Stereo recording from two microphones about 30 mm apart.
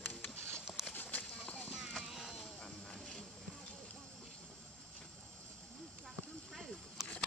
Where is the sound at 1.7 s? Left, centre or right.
Centre.